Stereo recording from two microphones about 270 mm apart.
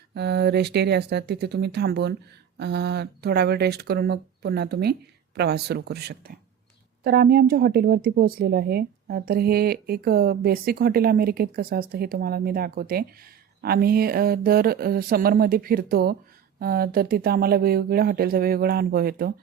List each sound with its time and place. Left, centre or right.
0.1 s speech: right